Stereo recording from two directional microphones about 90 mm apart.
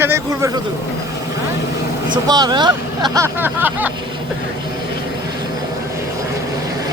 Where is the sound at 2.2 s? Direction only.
45° right (ahead or behind).